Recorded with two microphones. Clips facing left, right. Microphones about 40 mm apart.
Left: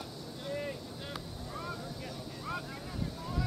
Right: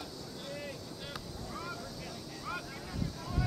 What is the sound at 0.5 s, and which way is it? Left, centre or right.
Boat, centre.